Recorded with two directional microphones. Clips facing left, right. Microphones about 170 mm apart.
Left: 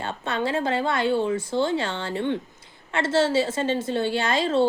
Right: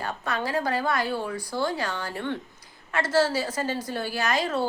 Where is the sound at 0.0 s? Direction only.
25° left (ahead or behind).